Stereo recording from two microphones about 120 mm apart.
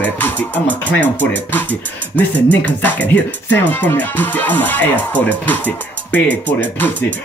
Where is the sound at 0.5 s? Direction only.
15° right (ahead or behind).